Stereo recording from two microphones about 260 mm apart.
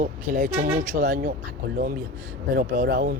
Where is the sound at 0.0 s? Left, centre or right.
Right.